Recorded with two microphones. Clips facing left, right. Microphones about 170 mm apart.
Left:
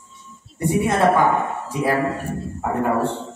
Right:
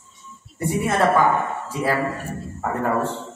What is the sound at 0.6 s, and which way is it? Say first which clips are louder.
A woman's voice: left 2 dB; 15° left (ahead or behind).